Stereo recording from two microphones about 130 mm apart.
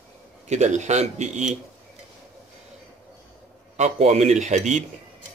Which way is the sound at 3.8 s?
55° right (ahead or behind).